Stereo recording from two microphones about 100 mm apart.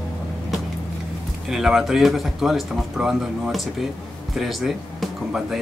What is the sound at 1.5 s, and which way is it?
Speech, 5° right (ahead or behind).